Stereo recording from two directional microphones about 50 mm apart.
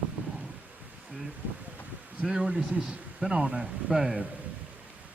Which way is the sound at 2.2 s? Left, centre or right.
Centre.